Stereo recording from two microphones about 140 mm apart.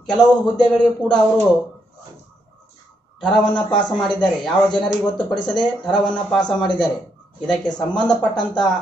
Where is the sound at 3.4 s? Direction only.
35° left (ahead or behind).